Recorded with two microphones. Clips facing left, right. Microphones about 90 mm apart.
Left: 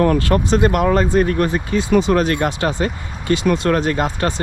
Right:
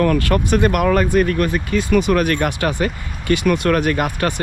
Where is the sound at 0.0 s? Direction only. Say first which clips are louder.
Left 1 dB; 25° left (ahead or behind).